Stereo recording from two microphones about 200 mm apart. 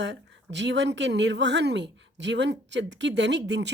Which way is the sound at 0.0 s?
60° right (ahead or behind).